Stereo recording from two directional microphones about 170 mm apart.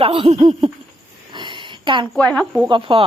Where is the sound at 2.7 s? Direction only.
30° right (ahead or behind).